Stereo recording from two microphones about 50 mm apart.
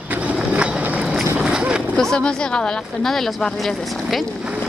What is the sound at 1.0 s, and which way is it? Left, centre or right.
Boat, centre.